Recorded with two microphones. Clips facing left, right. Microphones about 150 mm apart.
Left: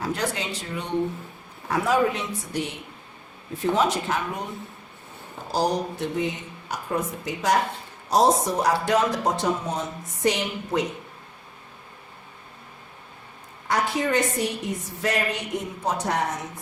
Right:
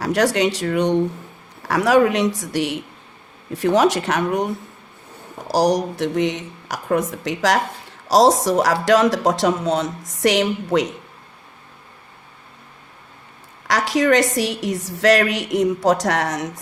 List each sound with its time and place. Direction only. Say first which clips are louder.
0.0 s speech: right 10 dB; 80° right
13.7 s speech: right 7 dB; 90° right